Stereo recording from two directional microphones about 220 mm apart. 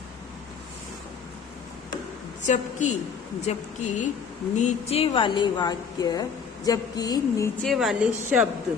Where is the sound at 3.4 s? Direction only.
30° left (ahead or behind).